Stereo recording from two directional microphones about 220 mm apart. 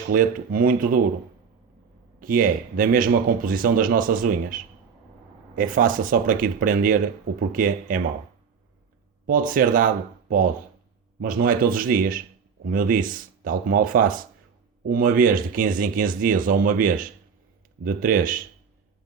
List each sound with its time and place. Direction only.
0.1 s speech: 40° right (ahead or behind)
2.2 s speech: 40° right (ahead or behind)
9.2 s speech: 40° right (ahead or behind)